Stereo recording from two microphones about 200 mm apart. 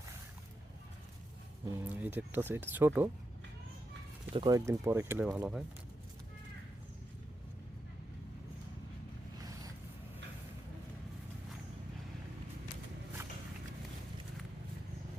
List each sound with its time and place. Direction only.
1.6 s speech: 10° right (ahead or behind)
4.4 s speech: 20° right (ahead or behind)
9.4 s vehicle: 20° right (ahead or behind)